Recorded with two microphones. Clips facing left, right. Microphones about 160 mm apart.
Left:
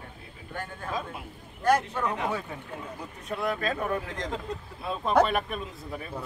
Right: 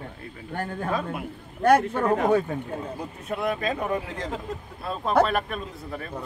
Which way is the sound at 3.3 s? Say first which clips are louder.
Right 2 dB; 20° right (ahead or behind).